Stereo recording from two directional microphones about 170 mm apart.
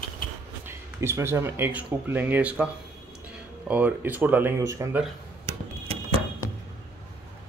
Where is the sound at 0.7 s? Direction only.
15° right (ahead or behind).